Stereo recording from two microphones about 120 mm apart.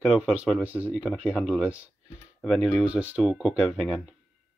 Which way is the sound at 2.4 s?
Centre (ahead or behind).